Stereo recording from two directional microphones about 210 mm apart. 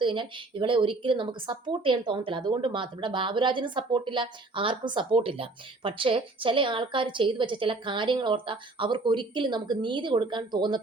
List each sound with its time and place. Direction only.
0.0 s speech: 25° right (ahead or behind)